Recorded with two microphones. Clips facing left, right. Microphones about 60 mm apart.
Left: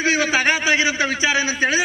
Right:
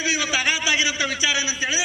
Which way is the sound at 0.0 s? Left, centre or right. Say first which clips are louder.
Left 5 dB; left.